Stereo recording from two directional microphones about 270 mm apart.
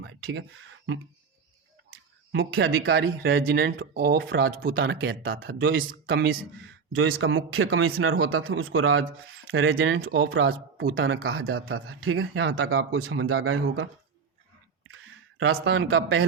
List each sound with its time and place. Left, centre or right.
0.0 s speech: right
2.3 s speech: right
14.8 s a sound: right